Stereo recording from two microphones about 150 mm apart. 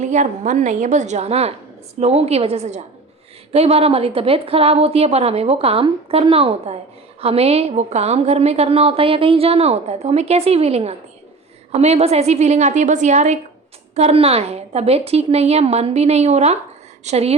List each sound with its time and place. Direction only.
0.0 s a woman's voice: 50° right (ahead or behind)